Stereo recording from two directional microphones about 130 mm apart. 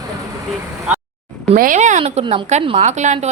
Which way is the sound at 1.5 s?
80° right.